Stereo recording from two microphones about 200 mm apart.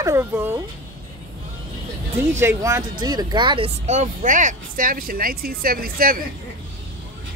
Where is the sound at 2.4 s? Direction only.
15° right (ahead or behind); by 6.2 s 45° right (ahead or behind).